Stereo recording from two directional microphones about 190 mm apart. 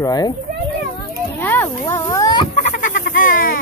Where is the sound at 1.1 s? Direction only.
10° left (ahead or behind).